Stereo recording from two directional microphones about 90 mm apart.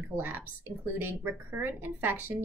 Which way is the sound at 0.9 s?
20° right (ahead or behind).